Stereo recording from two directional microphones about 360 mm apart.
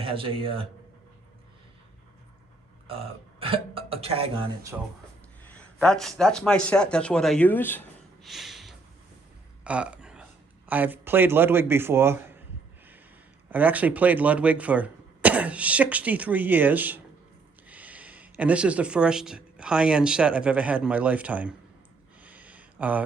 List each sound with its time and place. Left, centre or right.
0.0 s speech: centre
2.8 s speech: centre
5.5 s a man's voice: centre
9.6 s a sound: centre
10.7 s speech: centre
13.5 s speech: centre
22.2 s a sound: centre